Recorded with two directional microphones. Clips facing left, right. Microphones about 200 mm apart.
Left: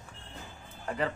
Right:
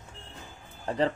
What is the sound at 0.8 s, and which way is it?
Speech, 30° right (ahead or behind).